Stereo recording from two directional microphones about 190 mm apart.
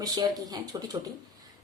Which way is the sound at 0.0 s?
20° right (ahead or behind).